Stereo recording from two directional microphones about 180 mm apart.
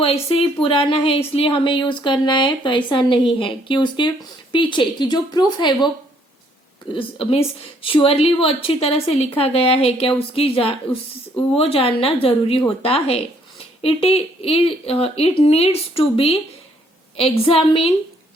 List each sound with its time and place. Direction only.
0.0 s speech: 30° left (ahead or behind)
6.9 s a woman's voice: 30° left (ahead or behind)